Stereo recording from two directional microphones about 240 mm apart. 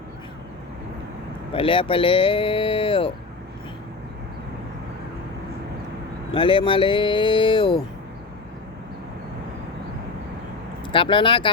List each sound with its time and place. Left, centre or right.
1.5 s speech: left
6.3 s speech: left
10.8 s speech: left